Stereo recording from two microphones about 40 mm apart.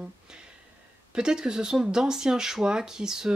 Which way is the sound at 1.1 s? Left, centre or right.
Centre.